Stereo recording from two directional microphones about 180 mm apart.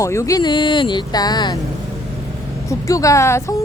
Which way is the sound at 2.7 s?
20° left (ahead or behind).